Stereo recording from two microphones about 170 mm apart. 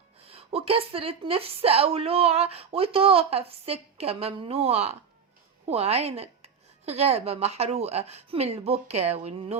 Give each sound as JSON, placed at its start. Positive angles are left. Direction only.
{"t": 0.3, "sound": "a woman's voice", "side_deg": -35}